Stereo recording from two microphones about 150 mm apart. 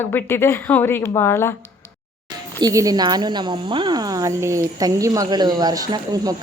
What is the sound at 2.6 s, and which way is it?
Speech, 25° right (ahead or behind).